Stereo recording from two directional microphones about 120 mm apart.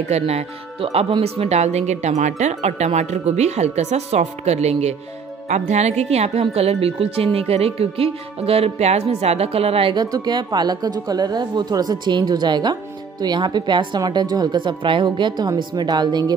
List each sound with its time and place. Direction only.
0.1 s a woman's voice: 60° right (ahead or behind)
9.9 s a woman's voice: 35° right (ahead or behind)